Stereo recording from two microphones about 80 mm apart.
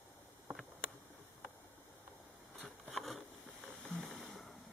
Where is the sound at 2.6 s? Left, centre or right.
Centre.